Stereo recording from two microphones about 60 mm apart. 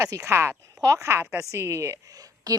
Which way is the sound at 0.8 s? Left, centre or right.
Right.